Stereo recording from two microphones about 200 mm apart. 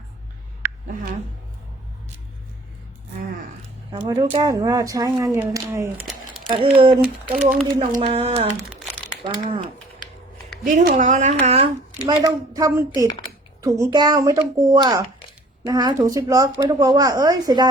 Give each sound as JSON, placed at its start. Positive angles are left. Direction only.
{"t": 0.6, "sound": "a sound", "side_deg": -10}
{"t": 3.9, "sound": "speech", "side_deg": -20}
{"t": 7.0, "sound": "speech", "side_deg": -5}
{"t": 7.9, "sound": "speech", "side_deg": -30}
{"t": 10.6, "sound": "speech", "side_deg": -40}
{"t": 12.0, "sound": "speech", "side_deg": -20}